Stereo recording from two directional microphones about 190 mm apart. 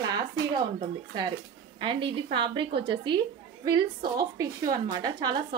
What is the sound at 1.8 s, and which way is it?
A woman's voice, 25° right (ahead or behind).